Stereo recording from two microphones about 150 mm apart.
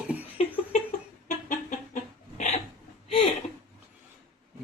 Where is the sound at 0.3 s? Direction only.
45° left (ahead or behind).